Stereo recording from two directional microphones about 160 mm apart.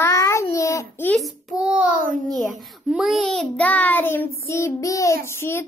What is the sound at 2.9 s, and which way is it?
Child singing, centre (ahead or behind).